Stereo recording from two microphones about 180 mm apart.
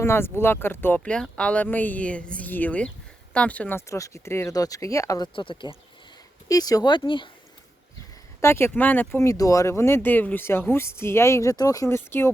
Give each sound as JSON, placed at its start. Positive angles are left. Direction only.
{"t": 0.0, "sound": "speech", "side_deg": 15}
{"t": 8.4, "sound": "speech", "side_deg": 15}